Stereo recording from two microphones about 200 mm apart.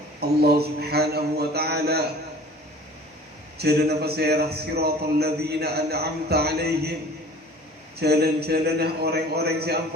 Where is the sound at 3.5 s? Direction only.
55° right (ahead or behind).